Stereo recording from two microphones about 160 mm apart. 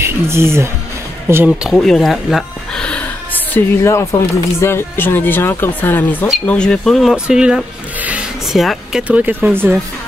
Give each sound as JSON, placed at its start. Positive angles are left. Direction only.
{"t": 0.0, "sound": "speech", "side_deg": -15}